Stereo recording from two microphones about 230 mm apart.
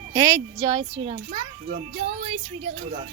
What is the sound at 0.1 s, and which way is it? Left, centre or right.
A child's voice, centre.